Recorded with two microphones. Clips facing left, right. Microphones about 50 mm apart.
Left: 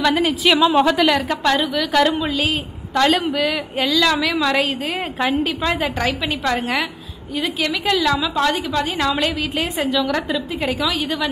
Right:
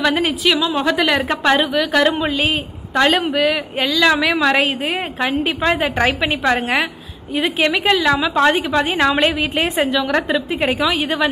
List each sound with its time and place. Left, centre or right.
0.0 s a woman's voice: centre
2.9 s a woman's voice: centre
4.0 s a woman's voice: right
9.6 s a woman's voice: centre